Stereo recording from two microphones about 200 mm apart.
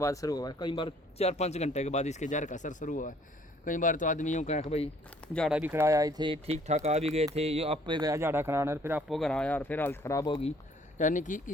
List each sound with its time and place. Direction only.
0.0 s speech: 15° left (ahead or behind); by 4.9 s 35° left (ahead or behind)
5.3 s speech: centre (ahead or behind); by 10.5 s 25° left (ahead or behind)
10.9 s speech: 40° left (ahead or behind)